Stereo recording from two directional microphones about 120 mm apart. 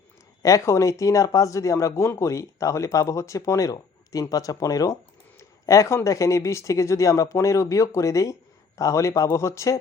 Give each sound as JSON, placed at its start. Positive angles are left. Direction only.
{"t": 0.4, "sound": "speech", "side_deg": 25}